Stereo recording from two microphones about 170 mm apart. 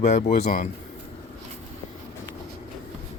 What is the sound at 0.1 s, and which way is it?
Speech, 40° left (ahead or behind).